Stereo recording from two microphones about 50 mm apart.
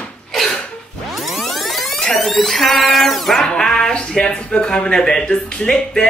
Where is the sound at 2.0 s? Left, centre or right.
Centre.